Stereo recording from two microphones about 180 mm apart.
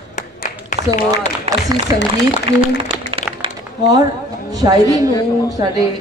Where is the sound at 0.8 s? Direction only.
35° right (ahead or behind).